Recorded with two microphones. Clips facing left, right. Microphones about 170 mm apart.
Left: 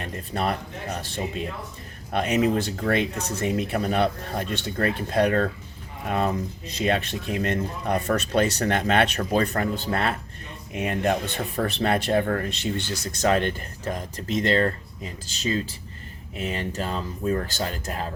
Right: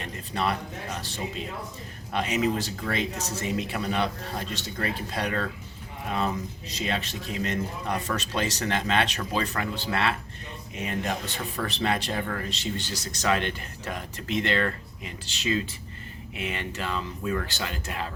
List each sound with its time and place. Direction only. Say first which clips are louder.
0.0 s speech: left 2 dB; 45° left (ahead or behind)